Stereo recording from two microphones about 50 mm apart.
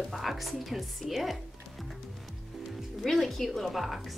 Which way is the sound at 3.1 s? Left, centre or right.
Centre.